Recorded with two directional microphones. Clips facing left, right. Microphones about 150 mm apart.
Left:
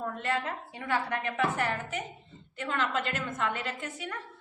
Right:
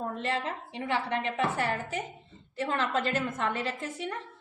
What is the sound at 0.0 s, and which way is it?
A woman's voice, 30° right (ahead or behind).